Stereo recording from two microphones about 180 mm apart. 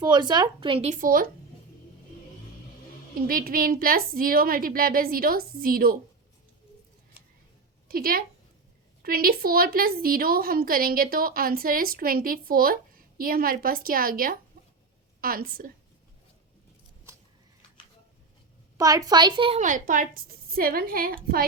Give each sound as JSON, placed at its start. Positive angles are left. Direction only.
{"t": 0.0, "sound": "a woman's voice", "side_deg": -25}
{"t": 0.9, "sound": "a woman's voice", "side_deg": -50}
{"t": 3.2, "sound": "a woman's voice", "side_deg": -55}
{"t": 7.9, "sound": "a woman's voice", "side_deg": -55}
{"t": 18.8, "sound": "a woman's voice", "side_deg": -20}
{"t": 19.5, "sound": "a woman's voice", "side_deg": -45}